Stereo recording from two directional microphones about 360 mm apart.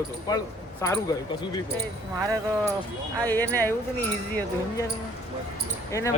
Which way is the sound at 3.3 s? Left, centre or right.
Centre.